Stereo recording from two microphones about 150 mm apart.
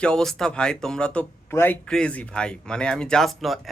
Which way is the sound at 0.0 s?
5° left (ahead or behind).